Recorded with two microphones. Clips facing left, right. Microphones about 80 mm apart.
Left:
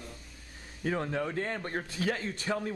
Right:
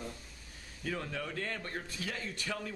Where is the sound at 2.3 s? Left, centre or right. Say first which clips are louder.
Left 6 dB; left.